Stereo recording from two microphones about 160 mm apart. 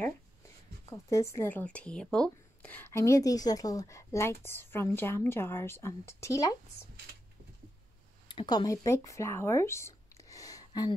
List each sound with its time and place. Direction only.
0.8 s speech: 20° left (ahead or behind)
8.3 s speech: 30° left (ahead or behind)